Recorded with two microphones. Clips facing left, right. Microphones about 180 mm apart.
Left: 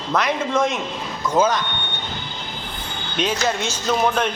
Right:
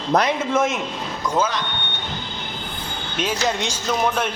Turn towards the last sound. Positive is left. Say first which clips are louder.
# left 2 dB
turn(degrees=-10)  # may be behind; listen again after turning